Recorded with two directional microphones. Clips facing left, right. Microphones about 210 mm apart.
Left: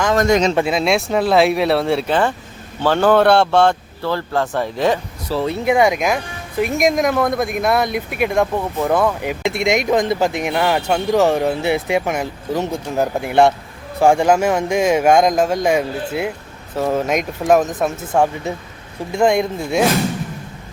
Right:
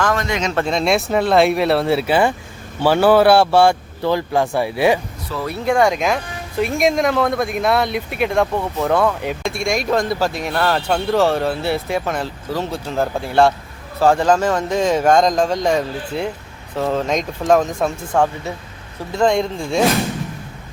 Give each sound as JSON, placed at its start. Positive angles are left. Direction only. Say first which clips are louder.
{"t": 0.2, "sound": "speech", "louder": "left 7 dB", "side_deg": 40}
{"t": 0.5, "sound": "speech", "louder": "left 1 dB", "side_deg": 5}
{"t": 5.3, "sound": "speech", "louder": "left 3 dB", "side_deg": 25}
{"t": 5.7, "sound": "speech", "louder": "even", "side_deg": 5}
{"t": 9.4, "sound": "speech", "louder": "left 5 dB", "side_deg": 20}